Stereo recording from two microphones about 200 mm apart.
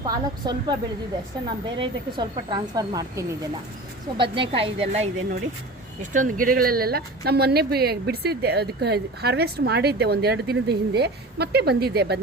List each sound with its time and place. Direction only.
0.0 s speech: 20° right (ahead or behind); by 12.2 s 55° right (ahead or behind)